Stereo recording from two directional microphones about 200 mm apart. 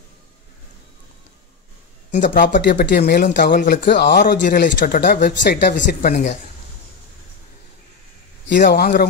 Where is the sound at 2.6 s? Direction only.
55° left (ahead or behind).